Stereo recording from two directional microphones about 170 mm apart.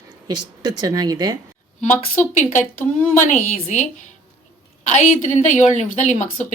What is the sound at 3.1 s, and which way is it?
A woman's voice, 50° left (ahead or behind).